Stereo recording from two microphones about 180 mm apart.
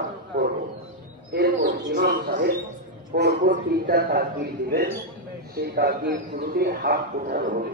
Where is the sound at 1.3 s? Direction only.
55° right (ahead or behind).